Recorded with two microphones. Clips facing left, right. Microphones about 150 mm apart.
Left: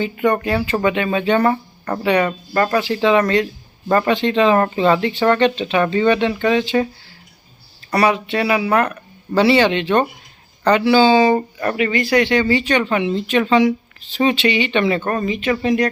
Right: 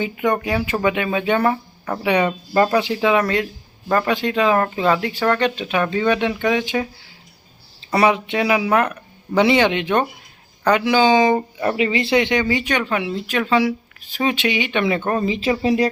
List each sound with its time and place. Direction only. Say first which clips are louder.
0.0 s speech: left 2 dB; 10° right (ahead or behind)
2.0 s speech: left 1 dB; 15° right (ahead or behind)
7.9 s speech: even; 20° right (ahead or behind)
11.8 s speech: left 2 dB; 25° right (ahead or behind)
15.3 s speech: left 2 dB; 30° right (ahead or behind)